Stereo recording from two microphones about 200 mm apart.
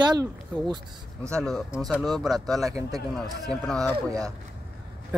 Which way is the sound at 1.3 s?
Centre (ahead or behind).